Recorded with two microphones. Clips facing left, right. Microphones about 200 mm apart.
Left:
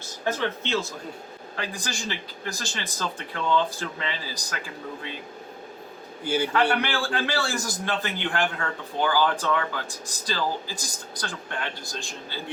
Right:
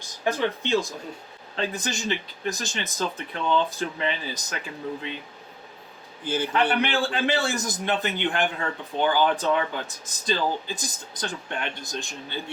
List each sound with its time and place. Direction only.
0.3 s speech: 15° right (ahead or behind)
6.2 s a man's voice: 10° left (ahead or behind)
6.5 s speech: 20° right (ahead or behind)